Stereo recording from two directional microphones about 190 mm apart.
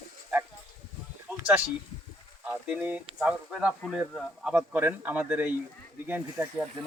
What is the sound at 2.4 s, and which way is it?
Speech, 10° right (ahead or behind).